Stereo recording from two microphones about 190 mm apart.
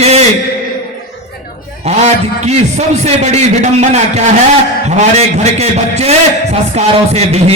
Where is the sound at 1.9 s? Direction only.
35° right (ahead or behind).